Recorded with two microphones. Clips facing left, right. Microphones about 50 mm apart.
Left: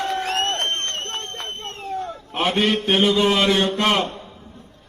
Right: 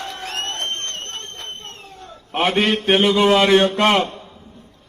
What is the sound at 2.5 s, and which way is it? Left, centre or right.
Speech, right.